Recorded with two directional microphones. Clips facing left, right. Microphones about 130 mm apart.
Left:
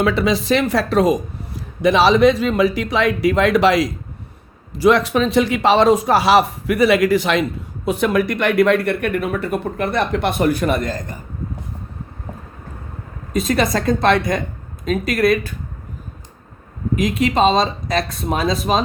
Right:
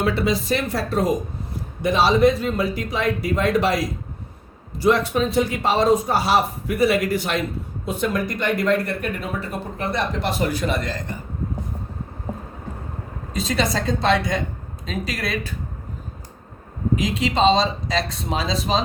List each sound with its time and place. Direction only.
0.0 s speech: 90° left
7.9 s speech: 70° left (ahead or behind); by 11.0 s 45° left (ahead or behind)
13.3 s speech: 50° left (ahead or behind)
17.0 s speech: 55° left (ahead or behind)